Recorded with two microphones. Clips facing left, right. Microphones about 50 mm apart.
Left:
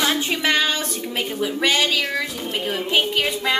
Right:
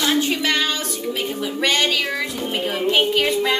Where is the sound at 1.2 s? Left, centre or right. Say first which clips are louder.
Left 1 dB; centre.